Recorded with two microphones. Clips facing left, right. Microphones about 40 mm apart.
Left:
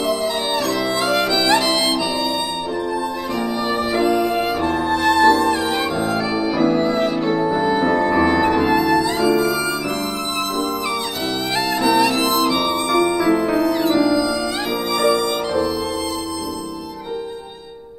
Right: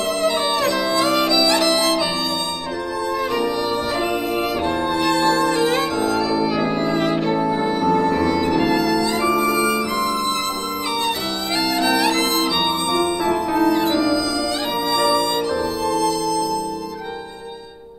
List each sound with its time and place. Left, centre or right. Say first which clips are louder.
1.3 s music: even; left
4.6 s music: left 3 dB; right
6.6 s music: left 3 dB; right
7.7 s music: left 1 dB; left
9.4 s music: right 1 dB; right
11.5 s music: left 2 dB; left
15.0 s music: left 1 dB; left